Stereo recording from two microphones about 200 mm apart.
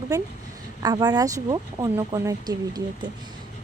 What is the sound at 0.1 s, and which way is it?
A woman's voice, 15° right (ahead or behind).